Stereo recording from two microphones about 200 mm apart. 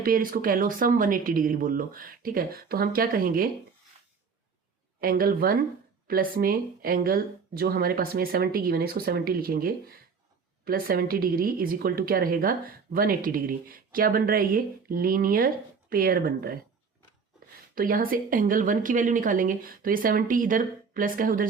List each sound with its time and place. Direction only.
0.0 s a woman's voice: 45° right (ahead or behind)
4.9 s a woman's voice: 45° right (ahead or behind)
17.7 s a woman's voice: 45° right (ahead or behind)